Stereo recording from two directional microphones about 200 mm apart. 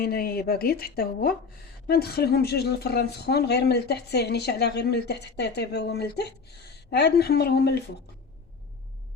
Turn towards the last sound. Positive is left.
turn(degrees=55)  # may be behind; listen again after turning